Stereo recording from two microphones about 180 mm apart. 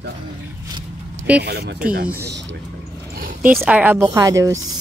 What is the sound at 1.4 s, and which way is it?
Speech, 65° right (ahead or behind).